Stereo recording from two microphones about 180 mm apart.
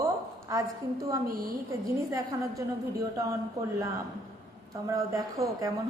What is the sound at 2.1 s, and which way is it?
A woman's voice, 15° right (ahead or behind).